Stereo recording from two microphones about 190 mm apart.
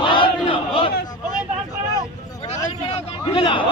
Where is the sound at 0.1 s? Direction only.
25° left (ahead or behind).